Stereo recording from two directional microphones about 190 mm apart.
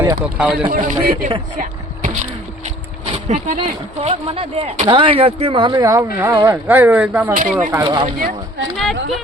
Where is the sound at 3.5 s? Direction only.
30° right (ahead or behind); by 7.4 s 10° right (ahead or behind).